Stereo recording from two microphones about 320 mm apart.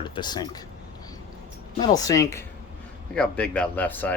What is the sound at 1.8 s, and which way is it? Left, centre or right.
Speech, centre.